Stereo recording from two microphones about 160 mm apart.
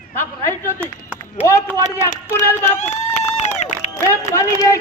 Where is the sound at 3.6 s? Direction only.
45° left (ahead or behind).